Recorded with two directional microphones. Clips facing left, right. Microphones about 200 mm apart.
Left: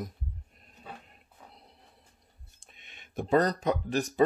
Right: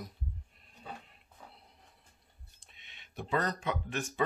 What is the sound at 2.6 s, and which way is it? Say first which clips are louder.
Speech: left 6 dB; 50° left (ahead or behind).